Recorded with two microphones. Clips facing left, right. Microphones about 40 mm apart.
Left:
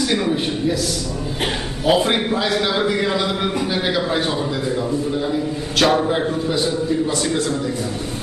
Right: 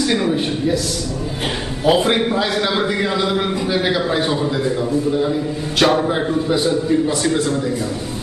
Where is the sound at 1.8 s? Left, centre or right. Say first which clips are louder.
Right 2 dB; centre.